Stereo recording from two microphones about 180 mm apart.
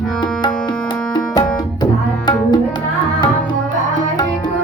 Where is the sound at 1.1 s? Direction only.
25° left (ahead or behind).